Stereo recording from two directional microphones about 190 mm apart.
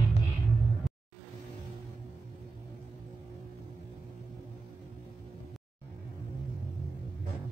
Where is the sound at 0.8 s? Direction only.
Centre (ahead or behind).